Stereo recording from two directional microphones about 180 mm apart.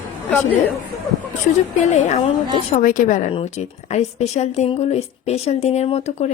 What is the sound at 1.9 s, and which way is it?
A woman's voice, 40° left (ahead or behind).